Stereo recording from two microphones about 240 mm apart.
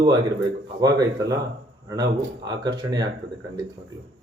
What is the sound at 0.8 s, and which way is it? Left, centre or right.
Speech, centre.